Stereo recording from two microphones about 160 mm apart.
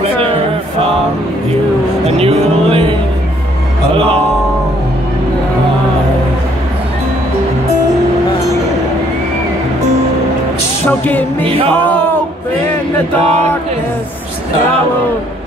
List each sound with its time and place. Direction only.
2.0 s speech: 40° right (ahead or behind)
3.9 s speech: 35° right (ahead or behind)
10.9 s music: 10° left (ahead or behind)
11.4 s speech: 35° right (ahead or behind)
13.2 s speech: 40° right (ahead or behind)